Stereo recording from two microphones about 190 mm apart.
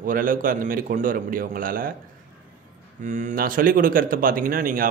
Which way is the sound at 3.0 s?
40° right (ahead or behind).